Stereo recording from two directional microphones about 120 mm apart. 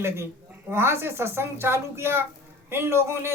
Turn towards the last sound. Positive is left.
turn(degrees=-20)  # may be behind; listen again after turning